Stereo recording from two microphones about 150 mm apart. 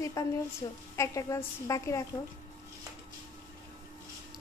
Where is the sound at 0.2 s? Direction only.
20° left (ahead or behind).